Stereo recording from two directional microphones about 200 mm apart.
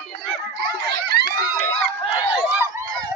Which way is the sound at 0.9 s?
50° right (ahead or behind).